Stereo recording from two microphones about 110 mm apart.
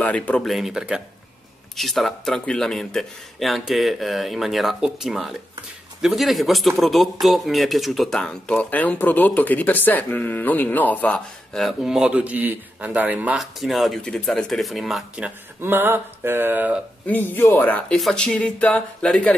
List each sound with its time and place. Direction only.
0.0 s speech: 15° left (ahead or behind)
0.5 s speech: 5° right (ahead or behind)
13.4 s speech: centre (ahead or behind)
15.2 s speech: 20° right (ahead or behind)
17.0 s speech: 15° left (ahead or behind)